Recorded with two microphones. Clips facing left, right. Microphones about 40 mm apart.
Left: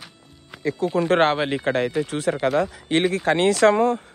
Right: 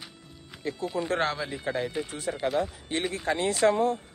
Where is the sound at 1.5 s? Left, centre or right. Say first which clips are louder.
Left 8 dB; left.